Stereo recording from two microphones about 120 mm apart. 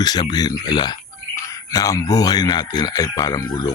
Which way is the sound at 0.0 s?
35° left (ahead or behind).